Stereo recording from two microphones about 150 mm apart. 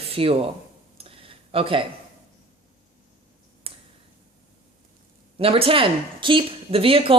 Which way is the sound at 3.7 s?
40° right (ahead or behind).